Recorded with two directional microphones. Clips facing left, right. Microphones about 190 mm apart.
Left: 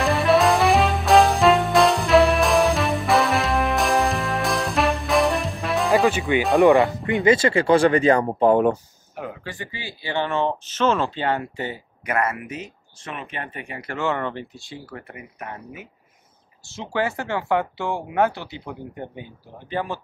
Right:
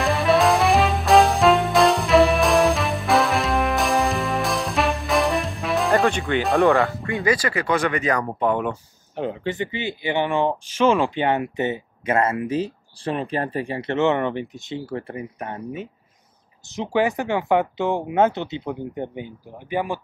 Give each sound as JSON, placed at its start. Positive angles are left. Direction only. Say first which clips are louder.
{"t": 0.0, "sound": "music", "louder": "even", "side_deg": 0}
{"t": 6.7, "sound": "speech", "louder": "left 3 dB", "side_deg": 20}
{"t": 9.1, "sound": "speech", "louder": "right 7 dB", "side_deg": -25}
{"t": 16.7, "sound": "speech", "louder": "right 4 dB", "side_deg": -15}